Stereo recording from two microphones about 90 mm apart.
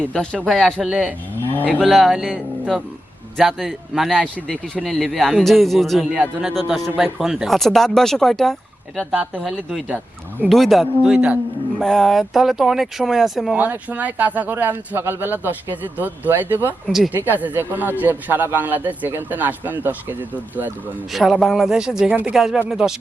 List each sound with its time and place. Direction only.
0.0 s a man's voice: 10° left (ahead or behind)
0.8 s speech: 5° right (ahead or behind)
1.4 s cattle: 25° left (ahead or behind)
1.9 s a man's voice: centre (ahead or behind)
9.9 s speech: 20° right (ahead or behind)
10.5 s a man's voice: centre (ahead or behind)
11.0 s speech: 15° right (ahead or behind)
11.8 s a man's voice: 5° left (ahead or behind)
13.6 s a man's voice: 20° right (ahead or behind)
21.1 s a man's voice: centre (ahead or behind); by 22.4 s 15° right (ahead or behind)
22.4 s a man's voice: 5° right (ahead or behind)